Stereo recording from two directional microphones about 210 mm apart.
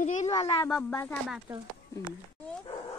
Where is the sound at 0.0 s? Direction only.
35° left (ahead or behind).